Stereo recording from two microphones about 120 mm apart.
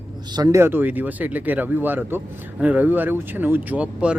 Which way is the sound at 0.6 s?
15° right (ahead or behind).